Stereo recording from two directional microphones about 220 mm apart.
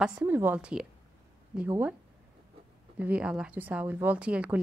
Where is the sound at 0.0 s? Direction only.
5° right (ahead or behind).